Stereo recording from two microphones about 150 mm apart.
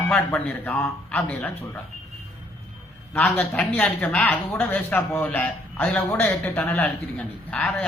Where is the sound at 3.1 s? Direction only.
5° left (ahead or behind).